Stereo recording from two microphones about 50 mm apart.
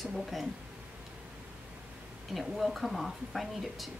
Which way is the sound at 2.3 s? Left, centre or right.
Centre.